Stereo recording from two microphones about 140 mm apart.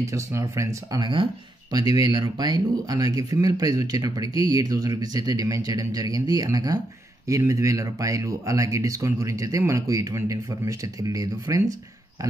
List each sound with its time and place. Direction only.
0.0 s speech: 20° right (ahead or behind)